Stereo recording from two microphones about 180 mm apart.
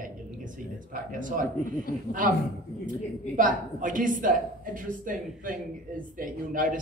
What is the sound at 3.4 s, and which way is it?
Speech, 50° right (ahead or behind).